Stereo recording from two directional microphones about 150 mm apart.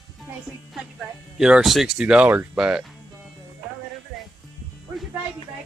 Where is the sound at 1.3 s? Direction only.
5° right (ahead or behind).